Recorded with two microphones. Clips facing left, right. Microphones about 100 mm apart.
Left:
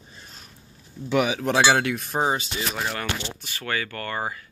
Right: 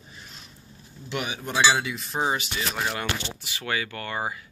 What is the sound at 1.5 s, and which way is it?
Speech, 60° left (ahead or behind).